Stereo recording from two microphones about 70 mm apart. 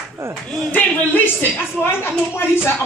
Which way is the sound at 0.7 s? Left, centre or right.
Left.